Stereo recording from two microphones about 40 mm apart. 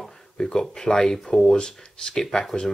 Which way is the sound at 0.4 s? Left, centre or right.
Centre.